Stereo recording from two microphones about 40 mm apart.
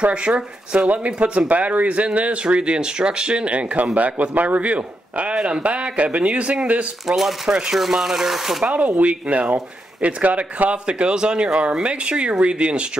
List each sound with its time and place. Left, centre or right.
0.0 s speech: right
7.1 s speech: centre
8.6 s speech: right